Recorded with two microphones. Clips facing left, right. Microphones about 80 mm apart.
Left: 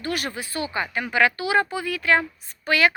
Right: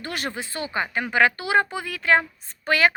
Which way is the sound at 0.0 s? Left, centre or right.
Right.